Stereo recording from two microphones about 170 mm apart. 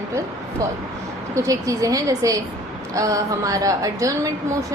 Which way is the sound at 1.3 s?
20° right (ahead or behind).